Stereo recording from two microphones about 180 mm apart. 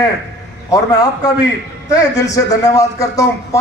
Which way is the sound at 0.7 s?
20° left (ahead or behind).